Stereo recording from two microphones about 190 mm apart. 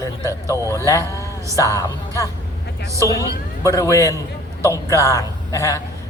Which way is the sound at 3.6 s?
15° left (ahead or behind).